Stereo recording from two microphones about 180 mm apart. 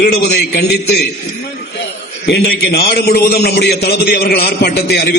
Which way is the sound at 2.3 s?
60° left (ahead or behind).